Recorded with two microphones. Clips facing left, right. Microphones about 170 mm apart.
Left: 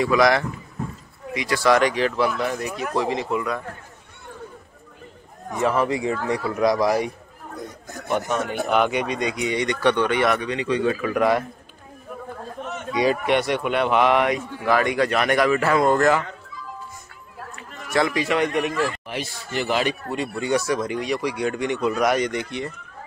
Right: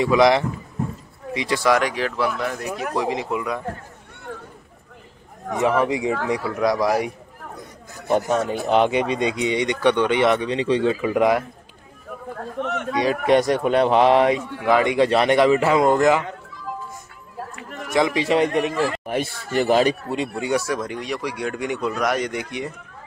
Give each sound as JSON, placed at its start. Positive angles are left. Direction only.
{"t": 0.0, "sound": "speech", "side_deg": -20}
{"t": 1.6, "sound": "speech", "side_deg": -5}
{"t": 2.9, "sound": "speech", "side_deg": -10}
{"t": 5.6, "sound": "speech", "side_deg": -15}
{"t": 6.6, "sound": "speech", "side_deg": 0}
{"t": 8.1, "sound": "speech", "side_deg": -35}
{"t": 12.5, "sound": "speech", "side_deg": -75}
{"t": 13.3, "sound": "speech", "side_deg": -40}
{"t": 14.6, "sound": "speech", "side_deg": -20}
{"t": 17.9, "sound": "speech", "side_deg": -20}
{"t": 19.0, "sound": "speech", "side_deg": -50}
{"t": 20.3, "sound": "speech", "side_deg": -5}